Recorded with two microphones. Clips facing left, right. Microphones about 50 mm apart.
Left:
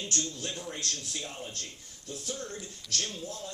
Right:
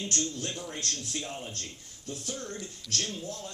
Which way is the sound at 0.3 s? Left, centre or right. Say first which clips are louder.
Right 1 dB; right.